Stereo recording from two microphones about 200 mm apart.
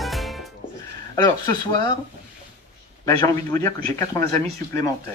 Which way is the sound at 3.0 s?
15° left (ahead or behind).